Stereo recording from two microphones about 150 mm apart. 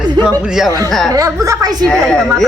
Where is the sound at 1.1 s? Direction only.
20° right (ahead or behind).